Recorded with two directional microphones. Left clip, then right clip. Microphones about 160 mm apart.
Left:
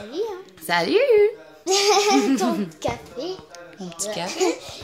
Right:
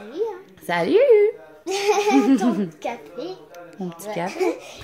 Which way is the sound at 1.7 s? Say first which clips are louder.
Left 2 dB; 50° left (ahead or behind).